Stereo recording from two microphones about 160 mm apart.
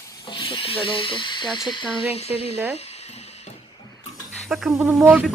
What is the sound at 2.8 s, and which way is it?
Music, 40° left (ahead or behind).